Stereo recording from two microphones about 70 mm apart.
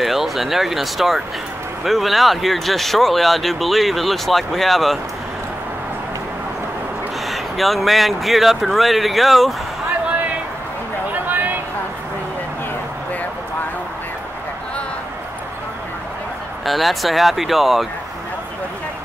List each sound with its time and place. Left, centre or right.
0.0 s speech: centre
7.2 s speech: centre
11.1 s a sound: right
16.6 s speech: centre